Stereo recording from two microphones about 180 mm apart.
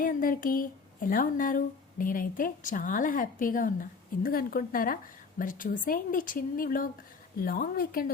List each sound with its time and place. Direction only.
0.0 s a woman's voice: 50° left (ahead or behind)